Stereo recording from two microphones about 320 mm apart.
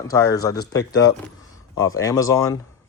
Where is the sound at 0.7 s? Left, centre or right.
Left.